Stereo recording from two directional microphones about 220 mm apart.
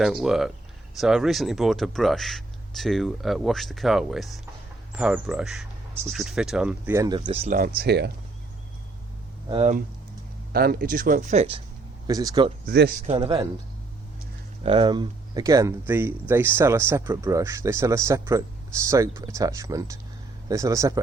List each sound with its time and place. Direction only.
0.0 s speech: centre (ahead or behind)
7.2 s speech: 30° right (ahead or behind)
7.8 s speech: 50° right (ahead or behind)
9.5 s speech: 25° right (ahead or behind)
10.5 s speech: 45° right (ahead or behind); by 11.6 s 25° right (ahead or behind)
12.0 s speech: 15° right (ahead or behind)
12.6 s a man's voice: 50° right (ahead or behind)
13.1 s speech: 20° right (ahead or behind)
14.6 s speech: 25° right (ahead or behind)